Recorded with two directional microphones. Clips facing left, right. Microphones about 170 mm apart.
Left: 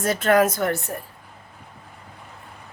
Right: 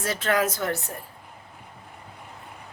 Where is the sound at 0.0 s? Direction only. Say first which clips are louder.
Left 6 dB; 50° left (ahead or behind).